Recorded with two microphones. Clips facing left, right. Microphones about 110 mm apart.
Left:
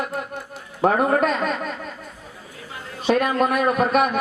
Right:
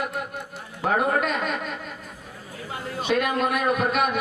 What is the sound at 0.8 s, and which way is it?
Speech, 40° left (ahead or behind).